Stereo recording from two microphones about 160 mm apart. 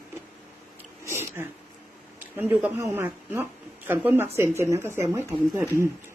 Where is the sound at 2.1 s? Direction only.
10° right (ahead or behind).